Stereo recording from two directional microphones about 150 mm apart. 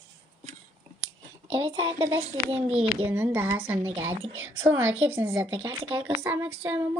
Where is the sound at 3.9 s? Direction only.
40° right (ahead or behind).